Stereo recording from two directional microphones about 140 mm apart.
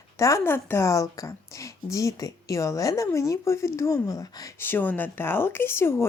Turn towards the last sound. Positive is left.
turn(degrees=15)  # may be behind; listen again after turning